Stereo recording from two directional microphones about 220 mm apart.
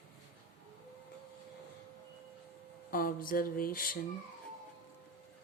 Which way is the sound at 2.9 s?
40° left (ahead or behind).